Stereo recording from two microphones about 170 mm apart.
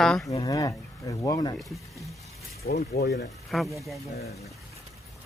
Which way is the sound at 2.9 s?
65° left (ahead or behind).